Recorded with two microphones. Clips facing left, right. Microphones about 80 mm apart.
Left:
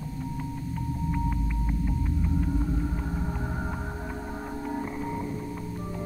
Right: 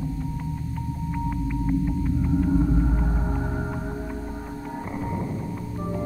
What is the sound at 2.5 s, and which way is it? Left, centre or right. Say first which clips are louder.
Music: right 7 dB; right.